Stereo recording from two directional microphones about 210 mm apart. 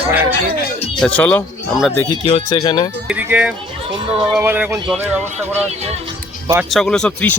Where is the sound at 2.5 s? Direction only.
20° left (ahead or behind).